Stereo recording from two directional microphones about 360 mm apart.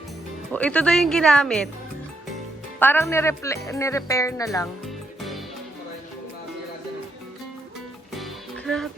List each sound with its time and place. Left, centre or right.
0.5 s speech: centre
2.7 s speech: centre
8.1 s music: centre